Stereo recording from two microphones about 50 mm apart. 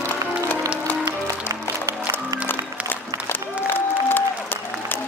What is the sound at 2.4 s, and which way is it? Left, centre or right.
Music, left.